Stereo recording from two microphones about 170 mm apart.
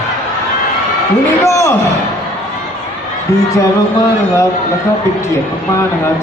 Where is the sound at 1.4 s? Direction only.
15° left (ahead or behind).